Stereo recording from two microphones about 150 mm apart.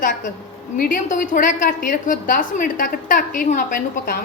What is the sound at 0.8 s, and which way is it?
A woman's voice, 65° left (ahead or behind).